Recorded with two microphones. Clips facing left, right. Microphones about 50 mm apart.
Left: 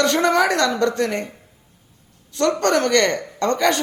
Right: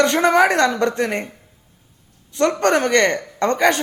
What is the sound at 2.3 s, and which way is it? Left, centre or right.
Speech, right.